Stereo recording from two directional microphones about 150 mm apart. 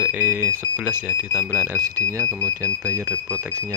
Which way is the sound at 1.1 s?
20° left (ahead or behind).